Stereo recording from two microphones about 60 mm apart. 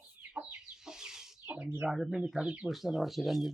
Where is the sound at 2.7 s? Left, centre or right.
Centre.